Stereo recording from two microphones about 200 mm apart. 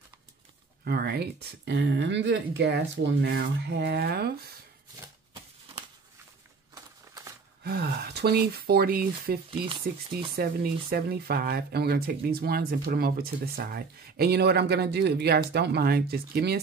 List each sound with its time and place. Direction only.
0.8 s speech: 55° right (ahead or behind)
6.7 s crumpling: 15° right (ahead or behind)
7.6 s speech: 50° right (ahead or behind)
9.7 s speech: 25° right (ahead or behind)
10.3 s speech: 50° right (ahead or behind)